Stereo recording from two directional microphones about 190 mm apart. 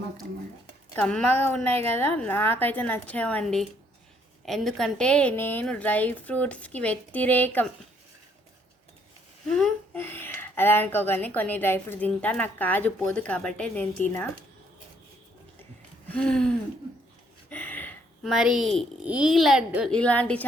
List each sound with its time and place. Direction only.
0.9 s a child's voice: 5° left (ahead or behind)
9.5 s speech: 5° left (ahead or behind)
16.0 s a child's voice: 5° left (ahead or behind)
17.5 s a sound: 10° left (ahead or behind)
18.3 s a child's voice: centre (ahead or behind)